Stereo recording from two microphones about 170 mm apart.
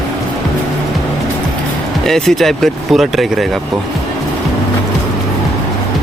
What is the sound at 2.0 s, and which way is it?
Speech, centre (ahead or behind).